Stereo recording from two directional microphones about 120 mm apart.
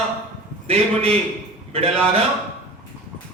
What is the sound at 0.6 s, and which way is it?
A man's voice, 55° right (ahead or behind).